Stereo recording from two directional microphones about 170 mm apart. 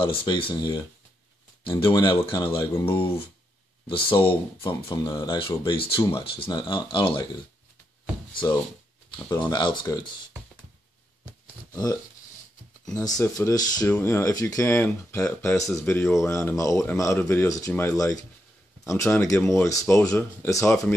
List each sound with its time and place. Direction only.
0.0 s speech: 30° left (ahead or behind)
9.1 s speech: 25° left (ahead or behind)
11.7 s speech: 20° left (ahead or behind)
13.0 s speech: 20° left (ahead or behind)